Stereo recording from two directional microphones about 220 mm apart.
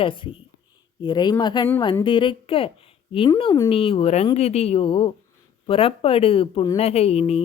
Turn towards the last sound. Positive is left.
turn(degrees=25)  # may be behind; listen again after turning